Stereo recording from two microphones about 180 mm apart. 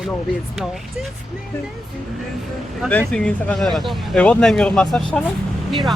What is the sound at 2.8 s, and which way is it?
Speech, 5° left (ahead or behind).